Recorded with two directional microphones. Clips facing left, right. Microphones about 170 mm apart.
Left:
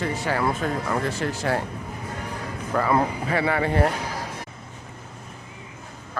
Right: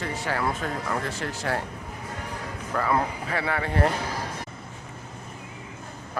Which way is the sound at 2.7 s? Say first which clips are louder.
Left 3 dB; 25° left (ahead or behind).